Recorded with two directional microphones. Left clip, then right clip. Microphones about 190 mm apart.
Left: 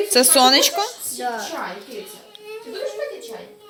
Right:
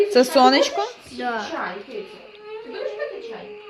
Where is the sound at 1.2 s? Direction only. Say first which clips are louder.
Even; 35° right (ahead or behind).